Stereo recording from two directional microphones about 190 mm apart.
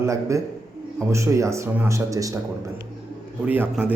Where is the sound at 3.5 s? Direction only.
10° right (ahead or behind).